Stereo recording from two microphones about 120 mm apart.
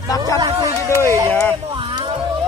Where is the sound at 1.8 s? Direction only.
45° right (ahead or behind).